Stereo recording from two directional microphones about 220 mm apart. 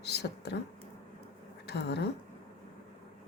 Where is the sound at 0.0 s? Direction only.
50° left (ahead or behind).